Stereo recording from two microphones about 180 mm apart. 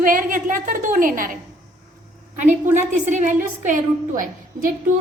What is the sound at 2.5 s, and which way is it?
Speech, 10° right (ahead or behind).